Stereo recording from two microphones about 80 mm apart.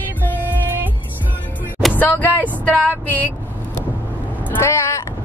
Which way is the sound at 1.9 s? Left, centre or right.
Left.